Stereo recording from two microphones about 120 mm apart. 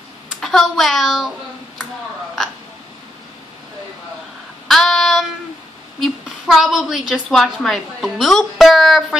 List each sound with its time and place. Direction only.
0.4 s speech: centre (ahead or behind)
4.6 s child singing: centre (ahead or behind)
5.9 s a woman's voice: centre (ahead or behind)